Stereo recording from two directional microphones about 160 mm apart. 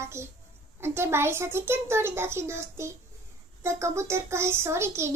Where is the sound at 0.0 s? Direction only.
15° right (ahead or behind).